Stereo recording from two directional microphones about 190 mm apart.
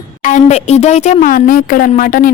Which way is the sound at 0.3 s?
40° left (ahead or behind).